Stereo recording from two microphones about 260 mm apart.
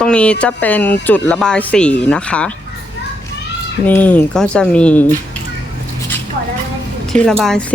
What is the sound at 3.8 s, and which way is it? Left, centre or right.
Speech, centre.